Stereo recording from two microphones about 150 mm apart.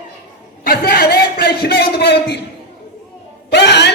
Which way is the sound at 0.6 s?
85° left.